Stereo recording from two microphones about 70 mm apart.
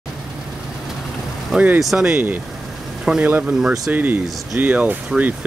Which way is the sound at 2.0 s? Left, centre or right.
Right.